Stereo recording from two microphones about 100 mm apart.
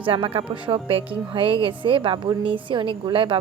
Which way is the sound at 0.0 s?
65° right (ahead or behind).